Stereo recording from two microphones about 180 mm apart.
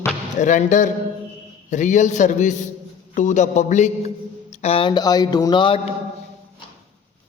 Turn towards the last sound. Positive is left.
turn(degrees=25)  # may be behind; listen again after turning